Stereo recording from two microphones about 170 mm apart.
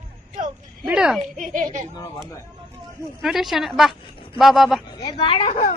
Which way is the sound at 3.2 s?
Centre (ahead or behind).